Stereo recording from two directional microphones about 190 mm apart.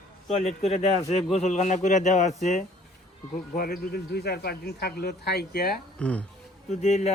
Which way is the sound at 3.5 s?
50° left (ahead or behind).